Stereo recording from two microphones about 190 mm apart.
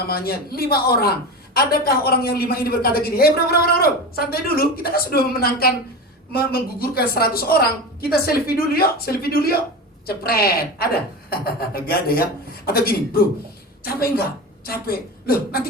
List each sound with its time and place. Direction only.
0.1 s a woman's voice: 55° left (ahead or behind)
14.7 s a woman's voice: 55° left (ahead or behind)